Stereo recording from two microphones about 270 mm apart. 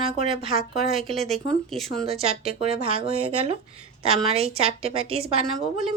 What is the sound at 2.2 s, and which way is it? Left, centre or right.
A woman's voice, right.